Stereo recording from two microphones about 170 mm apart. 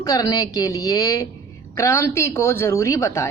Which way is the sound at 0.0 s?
20° left (ahead or behind).